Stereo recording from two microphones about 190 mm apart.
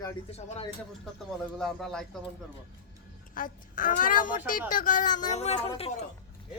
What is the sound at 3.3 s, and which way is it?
A woman's voice, 45° left (ahead or behind).